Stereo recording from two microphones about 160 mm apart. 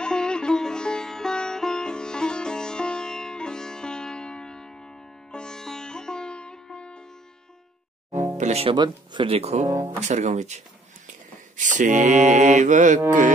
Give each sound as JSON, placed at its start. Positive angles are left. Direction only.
{"t": 0.0, "sound": "music", "side_deg": 5}
{"t": 8.1, "sound": "music", "side_deg": -15}
{"t": 8.4, "sound": "speech", "side_deg": -40}
{"t": 8.7, "sound": "speech", "side_deg": -30}
{"t": 9.7, "sound": "speech", "side_deg": -15}
{"t": 9.9, "sound": "speech", "side_deg": -45}